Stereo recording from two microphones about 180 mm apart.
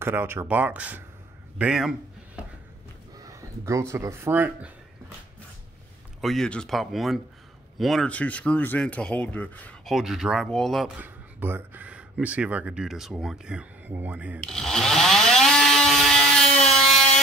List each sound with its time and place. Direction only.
0.0 s speech: 10° right (ahead or behind)
3.2 s speech: 15° right (ahead or behind)
6.2 s speech: 5° left (ahead or behind)
11.0 s speech: 10° right (ahead or behind)
14.4 s a sound: 5° left (ahead or behind)